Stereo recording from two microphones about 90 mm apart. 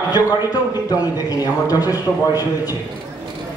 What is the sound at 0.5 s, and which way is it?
A man's voice, 45° left (ahead or behind).